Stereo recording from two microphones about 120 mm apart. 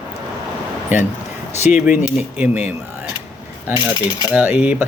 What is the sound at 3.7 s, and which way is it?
Speech, 35° left (ahead or behind).